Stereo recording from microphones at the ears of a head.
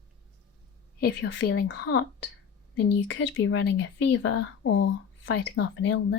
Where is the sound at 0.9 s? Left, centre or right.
Left.